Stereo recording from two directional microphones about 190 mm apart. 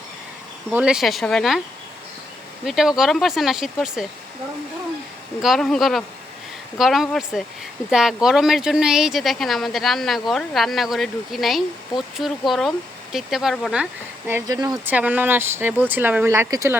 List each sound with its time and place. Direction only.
0.7 s speech: 5° right (ahead or behind)
2.6 s speech: centre (ahead or behind)
5.4 s speech: centre (ahead or behind)
14.3 s speech: 15° right (ahead or behind)
14.7 s speech: 5° right (ahead or behind)